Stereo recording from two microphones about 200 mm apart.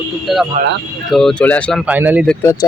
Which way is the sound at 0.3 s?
Centre (ahead or behind).